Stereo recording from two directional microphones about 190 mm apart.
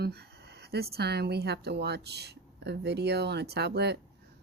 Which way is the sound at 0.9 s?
60° right (ahead or behind).